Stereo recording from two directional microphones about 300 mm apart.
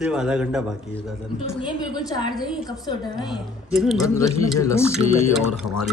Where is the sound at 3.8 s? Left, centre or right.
Centre.